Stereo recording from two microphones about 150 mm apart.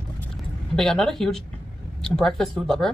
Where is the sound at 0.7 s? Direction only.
5° left (ahead or behind).